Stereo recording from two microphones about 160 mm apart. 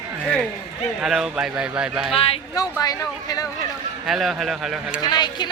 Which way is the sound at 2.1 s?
35° left (ahead or behind).